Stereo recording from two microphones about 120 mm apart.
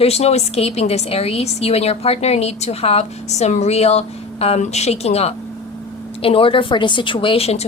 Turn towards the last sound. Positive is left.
turn(degrees=60)  # may be behind; listen again after turning